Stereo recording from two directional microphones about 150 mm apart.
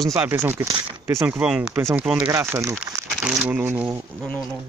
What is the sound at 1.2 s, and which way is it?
Speech, 5° right (ahead or behind).